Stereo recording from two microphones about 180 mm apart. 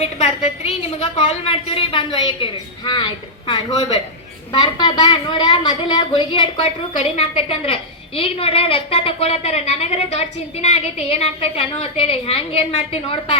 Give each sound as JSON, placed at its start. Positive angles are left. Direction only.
{"t": 0.0, "sound": "a woman's voice", "side_deg": 35}